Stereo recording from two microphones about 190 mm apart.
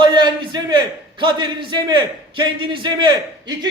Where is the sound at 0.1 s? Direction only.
25° right (ahead or behind).